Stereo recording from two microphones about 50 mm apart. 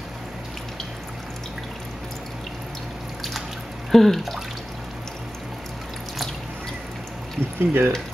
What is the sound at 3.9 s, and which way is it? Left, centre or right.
Speech, centre.